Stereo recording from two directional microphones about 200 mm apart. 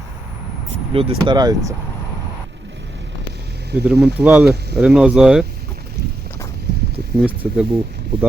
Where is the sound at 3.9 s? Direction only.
55° right (ahead or behind).